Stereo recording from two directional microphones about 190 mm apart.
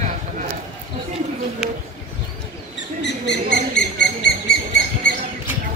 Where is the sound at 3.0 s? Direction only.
65° left (ahead or behind).